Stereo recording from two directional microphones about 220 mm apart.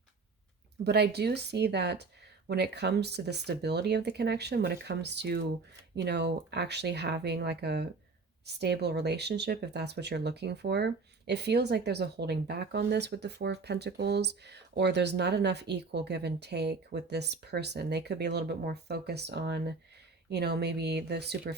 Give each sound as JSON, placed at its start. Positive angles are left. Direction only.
{"t": 0.9, "sound": "speech", "side_deg": -50}